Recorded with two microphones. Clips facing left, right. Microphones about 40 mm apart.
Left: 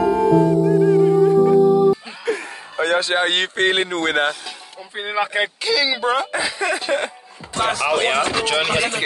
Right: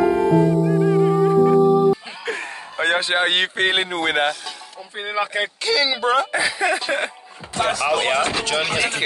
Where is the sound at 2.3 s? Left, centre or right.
Right.